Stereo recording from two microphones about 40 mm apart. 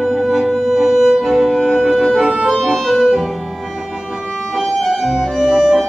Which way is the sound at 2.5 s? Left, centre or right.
Centre.